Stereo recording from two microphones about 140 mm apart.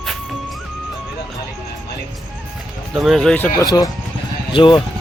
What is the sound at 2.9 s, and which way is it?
Speech, centre (ahead or behind).